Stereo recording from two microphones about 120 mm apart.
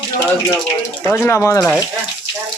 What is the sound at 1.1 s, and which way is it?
Speech, 15° left (ahead or behind).